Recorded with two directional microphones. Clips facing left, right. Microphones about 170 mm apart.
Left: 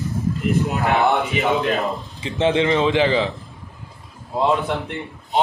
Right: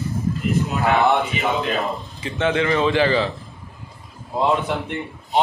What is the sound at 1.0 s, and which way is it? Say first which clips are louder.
Speech: even; centre (ahead or behind).